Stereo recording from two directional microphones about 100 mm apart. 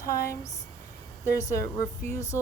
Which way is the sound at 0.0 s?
35° left (ahead or behind).